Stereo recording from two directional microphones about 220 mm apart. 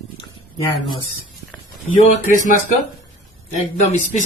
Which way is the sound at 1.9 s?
35° left (ahead or behind).